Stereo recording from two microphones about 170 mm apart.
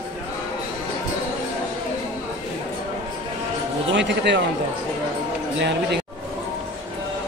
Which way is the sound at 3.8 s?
90° right.